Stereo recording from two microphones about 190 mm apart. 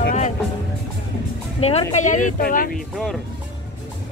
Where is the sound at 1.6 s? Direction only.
35° left (ahead or behind); by 2.7 s 50° left (ahead or behind).